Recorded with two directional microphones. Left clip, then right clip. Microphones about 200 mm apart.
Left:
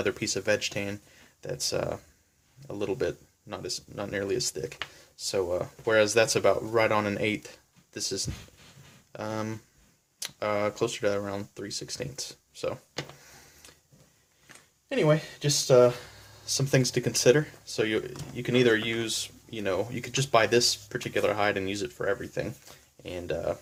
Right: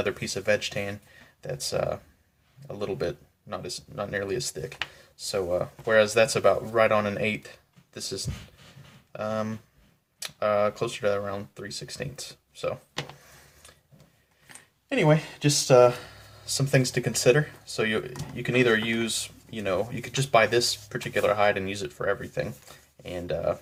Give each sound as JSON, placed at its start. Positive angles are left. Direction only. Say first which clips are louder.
{"t": 0.0, "sound": "speech", "louder": "right 1 dB", "side_deg": 40}
{"t": 14.8, "sound": "speech", "louder": "right 2 dB", "side_deg": 25}
{"t": 16.5, "sound": "speech", "louder": "right 1 dB", "side_deg": 40}